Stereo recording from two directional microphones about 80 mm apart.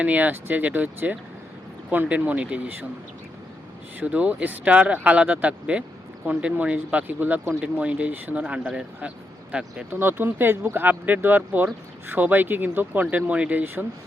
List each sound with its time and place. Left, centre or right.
0.0 s speech: centre
4.0 s speech: centre